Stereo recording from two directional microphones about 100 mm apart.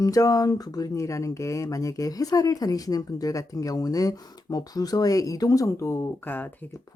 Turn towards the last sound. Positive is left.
turn(degrees=20)  # may be behind; listen again after turning